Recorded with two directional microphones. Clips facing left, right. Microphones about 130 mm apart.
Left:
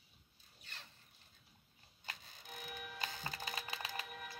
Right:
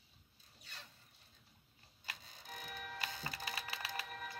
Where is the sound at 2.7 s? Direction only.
5° left (ahead or behind).